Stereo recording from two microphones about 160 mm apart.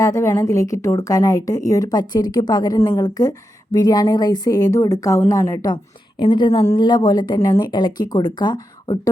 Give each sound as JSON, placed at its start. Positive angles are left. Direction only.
{"t": 0.0, "sound": "a woman's voice", "side_deg": 20}
{"t": 5.7, "sound": "a woman's voice", "side_deg": 30}